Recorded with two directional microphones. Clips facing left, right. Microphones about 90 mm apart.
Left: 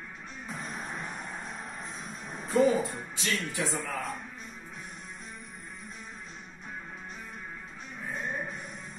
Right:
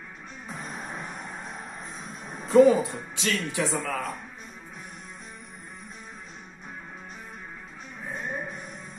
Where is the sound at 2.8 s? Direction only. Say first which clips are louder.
Right 3 dB; 90° right.